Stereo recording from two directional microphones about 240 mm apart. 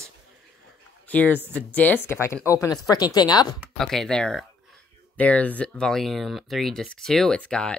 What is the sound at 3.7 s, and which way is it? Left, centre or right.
Speech, centre.